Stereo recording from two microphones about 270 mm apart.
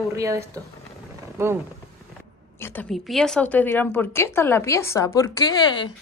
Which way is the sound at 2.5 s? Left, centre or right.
Centre.